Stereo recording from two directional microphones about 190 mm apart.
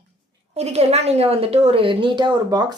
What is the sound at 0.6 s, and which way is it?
Speech, 35° right (ahead or behind).